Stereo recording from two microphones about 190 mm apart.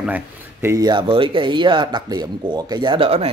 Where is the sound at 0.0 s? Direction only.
10° right (ahead or behind).